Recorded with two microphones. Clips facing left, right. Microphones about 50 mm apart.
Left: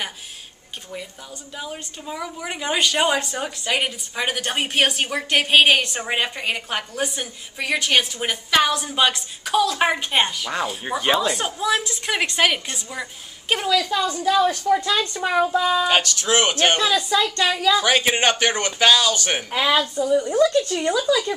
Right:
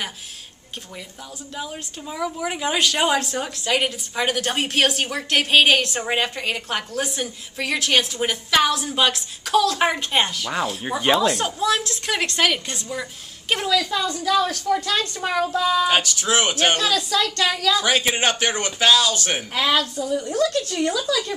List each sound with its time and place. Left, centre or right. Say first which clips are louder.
1.6 s a woman's voice: right 1 dB; centre
15.8 s a woman's voice: even; centre
16.7 s a woman's voice: left 2 dB; centre
17.8 s a woman's voice: left 2 dB; centre
19.2 s a woman's voice: left 1 dB; centre